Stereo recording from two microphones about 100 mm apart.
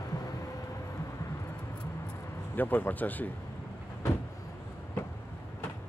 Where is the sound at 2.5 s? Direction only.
20° left (ahead or behind).